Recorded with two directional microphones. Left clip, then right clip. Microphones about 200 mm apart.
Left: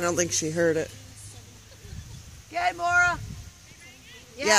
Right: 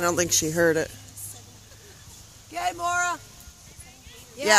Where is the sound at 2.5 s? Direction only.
35° left (ahead or behind).